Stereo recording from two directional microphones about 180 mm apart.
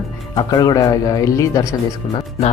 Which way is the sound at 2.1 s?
30° left (ahead or behind).